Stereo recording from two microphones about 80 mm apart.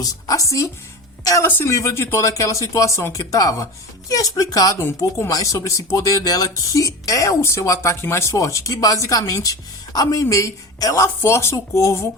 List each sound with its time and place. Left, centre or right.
0.0 s a woman's voice: left
1.5 s speech: left
1.7 s speech: left
4.9 s speech: left